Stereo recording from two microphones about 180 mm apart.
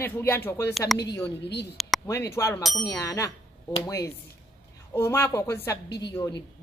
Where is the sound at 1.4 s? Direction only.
70° left (ahead or behind).